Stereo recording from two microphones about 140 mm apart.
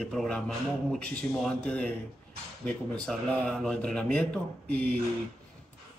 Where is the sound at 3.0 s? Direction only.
5° left (ahead or behind).